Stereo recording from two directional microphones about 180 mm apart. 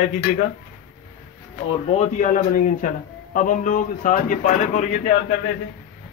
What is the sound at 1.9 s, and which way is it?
Speech, 45° left (ahead or behind).